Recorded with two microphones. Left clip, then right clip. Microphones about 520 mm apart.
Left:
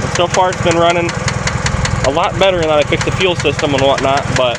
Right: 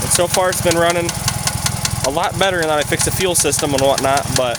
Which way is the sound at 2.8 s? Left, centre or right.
Right.